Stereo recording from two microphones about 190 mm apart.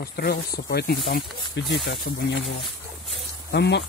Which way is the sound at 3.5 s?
65° left (ahead or behind).